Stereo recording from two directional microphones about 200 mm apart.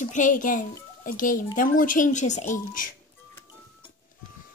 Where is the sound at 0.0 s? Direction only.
40° left (ahead or behind).